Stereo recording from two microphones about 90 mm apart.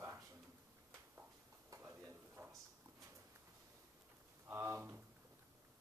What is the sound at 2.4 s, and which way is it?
Drawer open or close, 35° right (ahead or behind).